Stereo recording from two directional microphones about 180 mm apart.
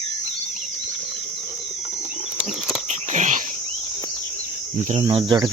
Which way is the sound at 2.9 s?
40° right (ahead or behind).